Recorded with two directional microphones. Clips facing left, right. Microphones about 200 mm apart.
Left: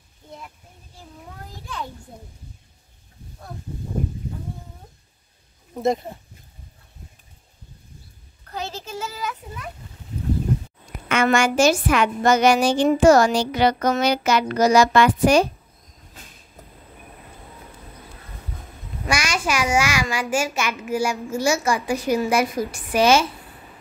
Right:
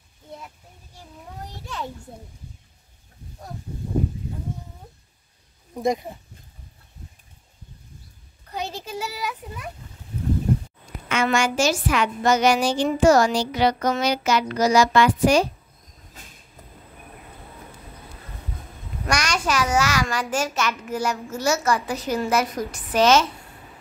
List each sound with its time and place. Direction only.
8.5 s speech: 15° right (ahead or behind)
11.1 s a woman's voice: 55° left (ahead or behind)
19.0 s a child's voice: 10° left (ahead or behind)